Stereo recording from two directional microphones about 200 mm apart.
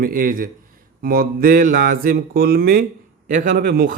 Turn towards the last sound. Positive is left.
turn(degrees=-45)  # may be behind; listen again after turning